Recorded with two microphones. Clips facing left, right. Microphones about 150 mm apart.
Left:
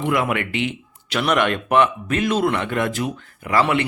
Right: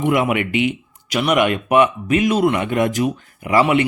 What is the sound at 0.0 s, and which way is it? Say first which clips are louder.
Speech: right 4 dB; 15° right (ahead or behind).